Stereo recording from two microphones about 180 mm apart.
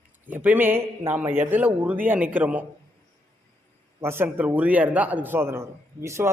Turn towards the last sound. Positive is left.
turn(degrees=-15)  # may be behind; listen again after turning